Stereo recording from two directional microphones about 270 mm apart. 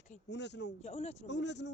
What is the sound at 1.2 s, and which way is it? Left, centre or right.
Speech, left.